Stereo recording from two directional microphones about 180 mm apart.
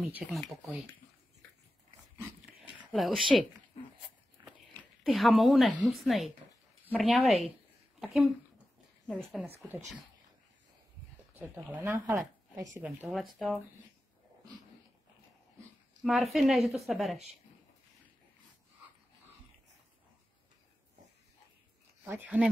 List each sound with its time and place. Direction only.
0.0 s a woman's voice: centre (ahead or behind)
2.8 s speech: centre (ahead or behind)
4.4 s biting: 25° right (ahead or behind)
5.0 s a woman's voice: centre (ahead or behind)
9.3 s a woman's voice: 5° right (ahead or behind)
11.5 s a woman's voice: 10° right (ahead or behind)
16.0 s a woman's voice: centre (ahead or behind)
22.0 s speech: 10° right (ahead or behind)